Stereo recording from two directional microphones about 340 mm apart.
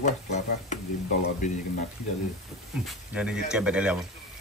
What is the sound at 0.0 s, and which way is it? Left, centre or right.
Speech, left.